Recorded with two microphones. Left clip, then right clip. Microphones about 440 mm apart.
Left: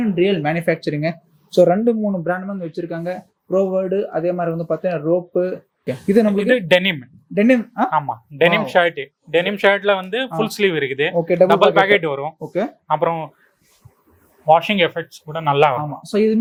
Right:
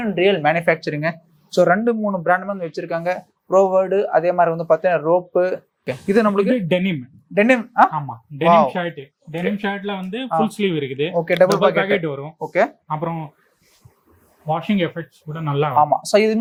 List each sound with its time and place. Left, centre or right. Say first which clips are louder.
0.2 s speech: right 3 dB; right
2.2 s speech: right 5 dB; right
6.5 s speech: left 5 dB; left
7.3 s speech: right 3 dB; right
7.9 s speech: left 7 dB; left
11.1 s speech: even; right
11.6 s speech: left 4 dB; left
12.9 s speech: left 7 dB; left
14.4 s speech: left 8 dB; left
15.8 s speech: right 5 dB; right